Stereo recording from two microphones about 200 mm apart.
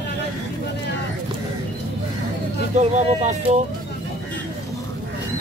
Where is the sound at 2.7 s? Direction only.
35° right (ahead or behind).